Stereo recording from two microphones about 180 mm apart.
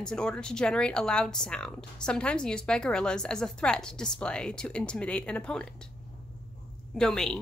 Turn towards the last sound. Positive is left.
turn(degrees=5)  # may be behind; listen again after turning